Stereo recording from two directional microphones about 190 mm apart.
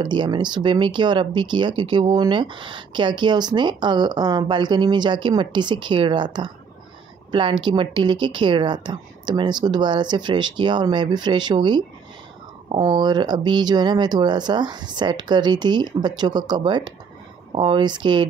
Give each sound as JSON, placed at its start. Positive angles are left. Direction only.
{"t": 0.0, "sound": "speech", "side_deg": -25}